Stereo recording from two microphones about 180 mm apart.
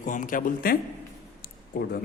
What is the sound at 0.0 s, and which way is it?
Speech, 45° left (ahead or behind).